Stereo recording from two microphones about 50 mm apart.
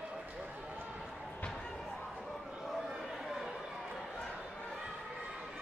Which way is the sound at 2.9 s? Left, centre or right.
Centre.